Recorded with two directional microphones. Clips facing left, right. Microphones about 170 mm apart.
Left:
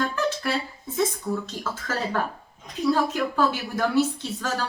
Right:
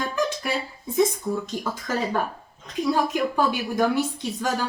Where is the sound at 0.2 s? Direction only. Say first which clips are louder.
Even; 15° right (ahead or behind).